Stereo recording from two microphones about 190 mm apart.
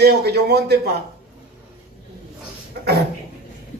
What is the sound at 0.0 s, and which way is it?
Speech, 60° right (ahead or behind).